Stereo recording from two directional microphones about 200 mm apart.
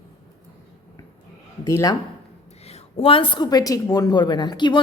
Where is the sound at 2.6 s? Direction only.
30° left (ahead or behind).